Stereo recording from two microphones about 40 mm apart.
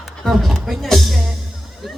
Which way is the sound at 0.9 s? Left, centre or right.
Centre.